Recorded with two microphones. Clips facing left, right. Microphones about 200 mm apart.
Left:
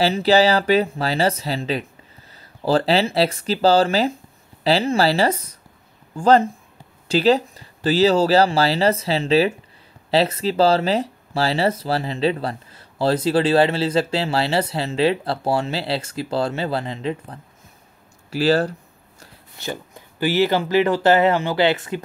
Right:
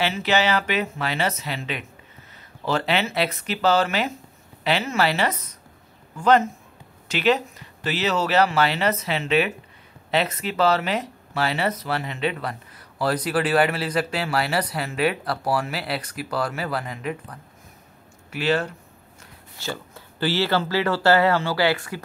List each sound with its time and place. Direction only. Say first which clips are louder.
0.0 s speech: left 6 dB; 35° left (ahead or behind)
18.3 s a sound: left 5 dB; 35° left (ahead or behind)
19.6 s speech: left 2 dB; 15° left (ahead or behind)